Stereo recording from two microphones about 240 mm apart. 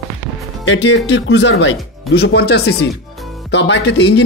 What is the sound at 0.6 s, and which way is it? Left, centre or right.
Speech, left.